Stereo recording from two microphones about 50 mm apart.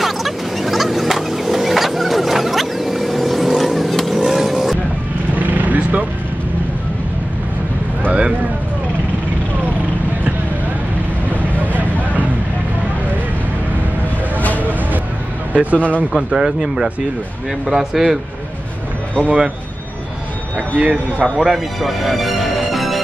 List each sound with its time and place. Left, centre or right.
0.0 s vehicle: centre
5.3 s vehicle: right
11.5 s vehicle: left
14.6 s a sound: right
16.3 s speech: centre
19.2 s speech: right
20.7 s speech: right
21.4 s music: centre